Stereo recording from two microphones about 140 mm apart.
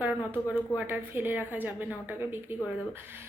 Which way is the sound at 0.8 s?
15° right (ahead or behind).